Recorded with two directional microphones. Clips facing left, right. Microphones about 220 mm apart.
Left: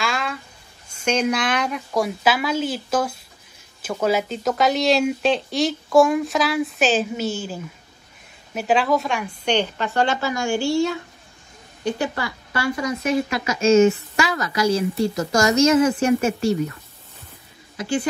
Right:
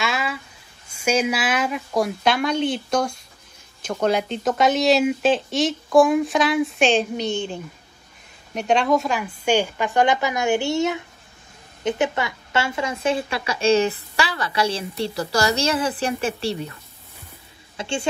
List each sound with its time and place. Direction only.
0.0 s a sound: 5° right (ahead or behind)
0.8 s a woman's voice: 10° right (ahead or behind); by 16.5 s 30° right (ahead or behind)
17.7 s speech: 25° right (ahead or behind)